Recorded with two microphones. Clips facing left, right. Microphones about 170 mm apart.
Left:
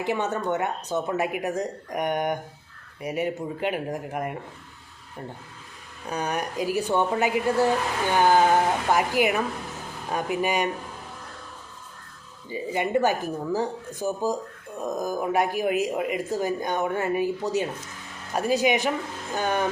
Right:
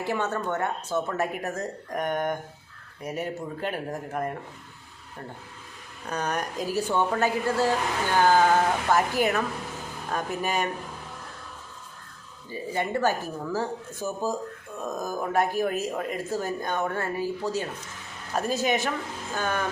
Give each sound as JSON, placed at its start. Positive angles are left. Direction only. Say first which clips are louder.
{"t": 0.0, "sound": "speech", "louder": "left 2 dB", "side_deg": 15}
{"t": 6.1, "sound": "speech", "louder": "left 1 dB", "side_deg": 10}
{"t": 12.5, "sound": "speech", "louder": "left 3 dB", "side_deg": 15}